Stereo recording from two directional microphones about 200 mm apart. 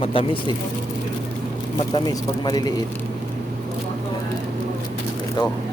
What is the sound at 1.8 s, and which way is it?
Speech, 20° left (ahead or behind).